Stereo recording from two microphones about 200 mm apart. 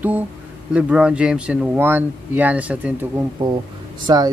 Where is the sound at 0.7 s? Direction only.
5° right (ahead or behind).